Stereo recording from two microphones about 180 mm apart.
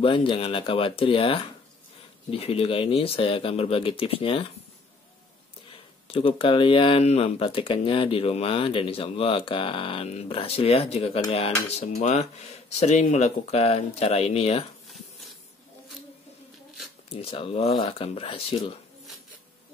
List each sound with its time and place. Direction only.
0.0 s speech: 30° left (ahead or behind)
6.0 s speech: 30° left (ahead or behind)
17.1 s speech: 30° left (ahead or behind)